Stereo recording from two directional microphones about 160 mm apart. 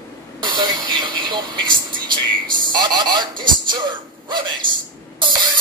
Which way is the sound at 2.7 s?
25° right (ahead or behind).